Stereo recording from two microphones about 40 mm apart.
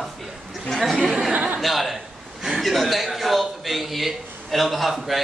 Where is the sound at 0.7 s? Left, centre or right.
Centre.